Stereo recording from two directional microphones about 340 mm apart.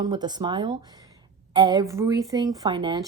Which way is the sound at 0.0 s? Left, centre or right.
Centre.